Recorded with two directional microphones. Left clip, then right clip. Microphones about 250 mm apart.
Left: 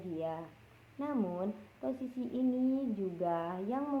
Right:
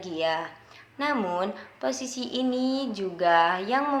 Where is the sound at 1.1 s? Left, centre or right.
Right.